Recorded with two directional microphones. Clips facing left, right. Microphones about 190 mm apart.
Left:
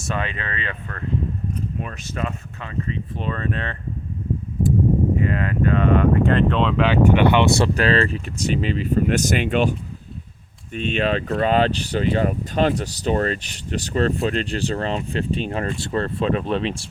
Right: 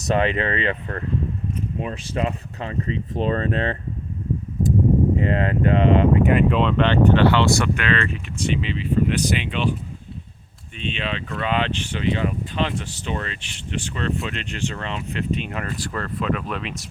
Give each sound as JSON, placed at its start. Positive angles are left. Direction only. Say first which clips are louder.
{"t": 0.2, "sound": "speech", "louder": "right 7 dB", "side_deg": -25}
{"t": 5.2, "sound": "speech", "louder": "right 1 dB", "side_deg": -25}
{"t": 6.5, "sound": "speech", "louder": "even", "side_deg": 0}
{"t": 7.6, "sound": "speech", "louder": "left 4 dB", "side_deg": 35}
{"t": 10.8, "sound": "speech", "louder": "left 7 dB", "side_deg": 45}